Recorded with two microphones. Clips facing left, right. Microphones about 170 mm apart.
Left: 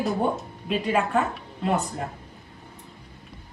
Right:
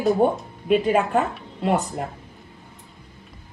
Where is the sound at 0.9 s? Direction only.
35° right (ahead or behind).